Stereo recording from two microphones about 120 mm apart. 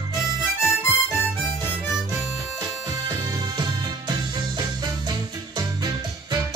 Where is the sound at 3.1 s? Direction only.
30° right (ahead or behind).